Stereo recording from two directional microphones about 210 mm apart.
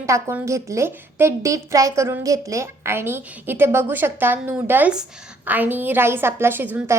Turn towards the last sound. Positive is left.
turn(degrees=-10)  # may be behind; listen again after turning